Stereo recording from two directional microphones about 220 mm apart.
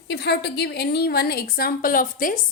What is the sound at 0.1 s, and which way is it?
A woman's voice, 50° left (ahead or behind).